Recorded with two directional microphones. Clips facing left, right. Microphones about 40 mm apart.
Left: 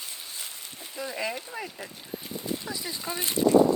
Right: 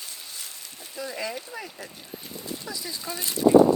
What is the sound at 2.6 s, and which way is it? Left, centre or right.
Speech, left.